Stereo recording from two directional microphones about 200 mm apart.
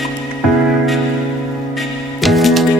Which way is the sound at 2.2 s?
Centre (ahead or behind).